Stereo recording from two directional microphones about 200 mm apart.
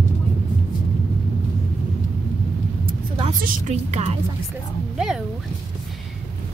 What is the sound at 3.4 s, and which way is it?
Speech, 35° right (ahead or behind).